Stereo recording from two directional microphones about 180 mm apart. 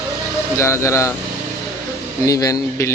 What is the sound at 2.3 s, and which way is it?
Speech, 20° left (ahead or behind).